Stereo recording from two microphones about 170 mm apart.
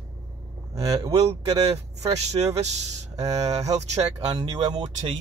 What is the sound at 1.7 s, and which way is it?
Speech, 40° right (ahead or behind).